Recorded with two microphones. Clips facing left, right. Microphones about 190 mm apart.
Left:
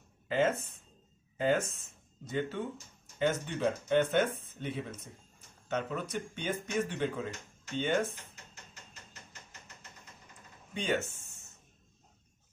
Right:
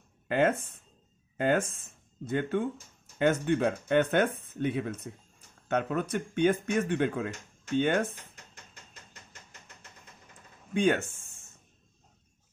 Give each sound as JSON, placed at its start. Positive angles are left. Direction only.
{"t": 1.3, "sound": "speech", "side_deg": -55}
{"t": 10.7, "sound": "speech", "side_deg": -55}